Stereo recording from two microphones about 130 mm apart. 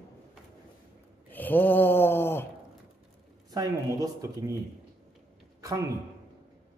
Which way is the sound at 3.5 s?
30° right (ahead or behind).